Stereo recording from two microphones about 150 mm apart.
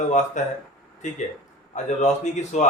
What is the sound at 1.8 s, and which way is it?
Speech, 50° left (ahead or behind).